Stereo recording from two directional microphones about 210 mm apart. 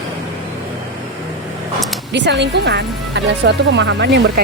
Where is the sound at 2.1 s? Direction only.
55° right (ahead or behind).